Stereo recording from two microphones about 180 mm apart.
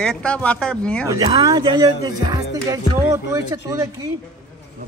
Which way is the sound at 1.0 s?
20° right (ahead or behind).